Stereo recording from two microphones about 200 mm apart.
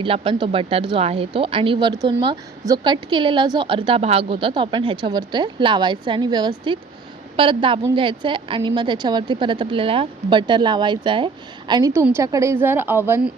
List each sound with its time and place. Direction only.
0.0 s a woman's voice: 25° right (ahead or behind); by 13.3 s 10° right (ahead or behind)